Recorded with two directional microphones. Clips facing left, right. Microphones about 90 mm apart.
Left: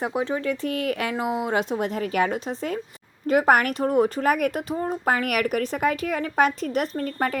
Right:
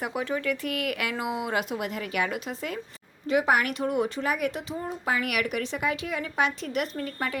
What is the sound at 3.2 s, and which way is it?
Speech, 50° left (ahead or behind).